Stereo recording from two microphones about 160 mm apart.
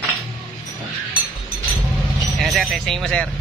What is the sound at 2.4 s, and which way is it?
Speech, centre (ahead or behind).